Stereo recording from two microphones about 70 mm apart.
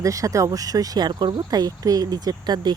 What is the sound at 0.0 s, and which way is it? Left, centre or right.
Speech, right.